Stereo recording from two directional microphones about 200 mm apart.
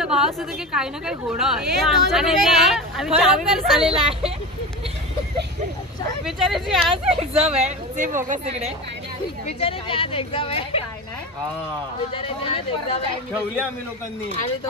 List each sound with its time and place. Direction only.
0.0 s a woman's voice: 5° right (ahead or behind)
3.9 s speech: 30° right (ahead or behind)
6.2 s a woman's voice: centre (ahead or behind)
7.1 s speech: 30° right (ahead or behind)
9.5 s a woman's voice: 30° left (ahead or behind)
12.1 s a woman's voice: 25° left (ahead or behind)